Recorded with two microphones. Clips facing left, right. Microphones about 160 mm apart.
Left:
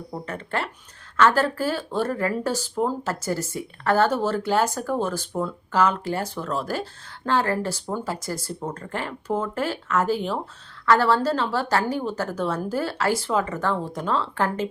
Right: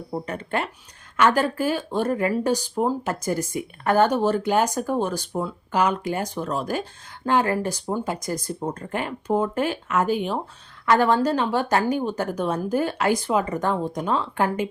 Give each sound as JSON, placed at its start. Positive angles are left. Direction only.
{"t": 0.1, "sound": "speech", "side_deg": -20}